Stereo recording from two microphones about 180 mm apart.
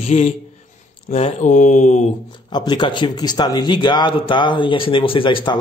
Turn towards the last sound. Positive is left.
turn(degrees=25)  # may be behind; listen again after turning